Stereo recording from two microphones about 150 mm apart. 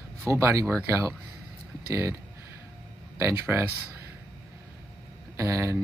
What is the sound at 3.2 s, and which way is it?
Speech, 20° right (ahead or behind).